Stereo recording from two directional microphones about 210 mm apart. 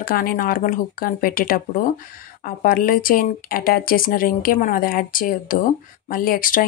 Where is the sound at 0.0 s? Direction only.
45° left (ahead or behind).